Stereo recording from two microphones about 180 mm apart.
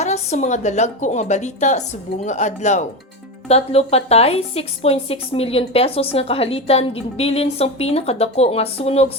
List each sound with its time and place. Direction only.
0.0 s speech: 35° left (ahead or behind)